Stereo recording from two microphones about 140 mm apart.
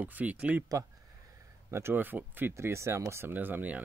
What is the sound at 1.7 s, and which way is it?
Speech, 15° right (ahead or behind).